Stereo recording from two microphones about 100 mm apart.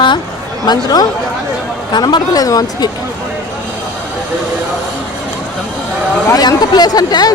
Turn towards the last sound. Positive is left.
turn(degrees=40)  # may be behind; listen again after turning